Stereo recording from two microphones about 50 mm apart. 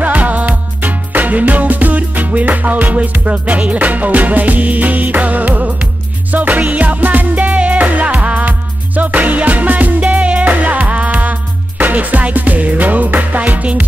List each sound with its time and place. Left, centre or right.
0.0 s music: right